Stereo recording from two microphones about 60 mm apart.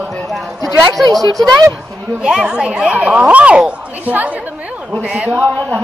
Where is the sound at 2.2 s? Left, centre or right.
Centre.